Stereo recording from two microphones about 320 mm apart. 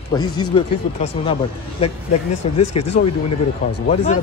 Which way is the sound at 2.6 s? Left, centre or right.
Left.